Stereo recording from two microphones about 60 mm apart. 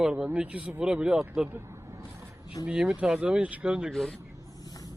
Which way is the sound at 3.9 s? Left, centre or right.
Centre.